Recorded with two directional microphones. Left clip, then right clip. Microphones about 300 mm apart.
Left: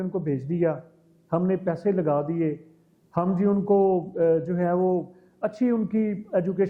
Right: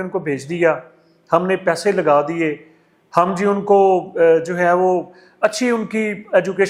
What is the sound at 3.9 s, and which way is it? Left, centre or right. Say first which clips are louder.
Speech: right 8 dB; right.